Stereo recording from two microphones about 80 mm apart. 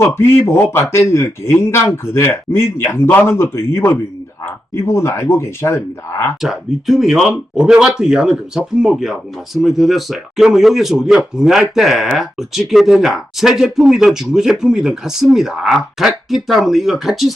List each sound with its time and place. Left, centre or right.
0.0 s speech: left
6.4 s speech: centre